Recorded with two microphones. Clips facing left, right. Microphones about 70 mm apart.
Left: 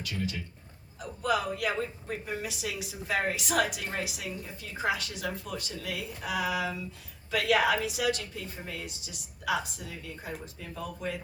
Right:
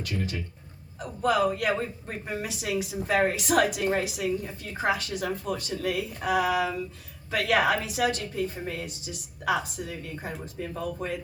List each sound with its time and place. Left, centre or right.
0.0 s a woman's voice: right